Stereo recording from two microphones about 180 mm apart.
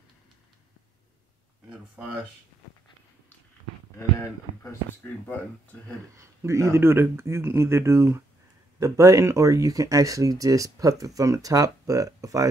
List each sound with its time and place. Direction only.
1.7 s speech: 5° right (ahead or behind)
6.1 s speech: 15° right (ahead or behind)